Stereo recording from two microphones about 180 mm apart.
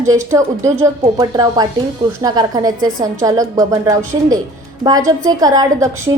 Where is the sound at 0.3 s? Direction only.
15° right (ahead or behind).